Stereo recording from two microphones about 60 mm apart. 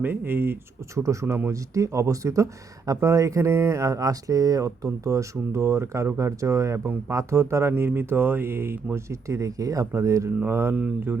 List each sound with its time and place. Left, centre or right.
0.0 s speech: right
0.9 s speech: right
7.8 s speech: right
9.0 s speech: right
9.9 s speech: right
10.4 s speech: right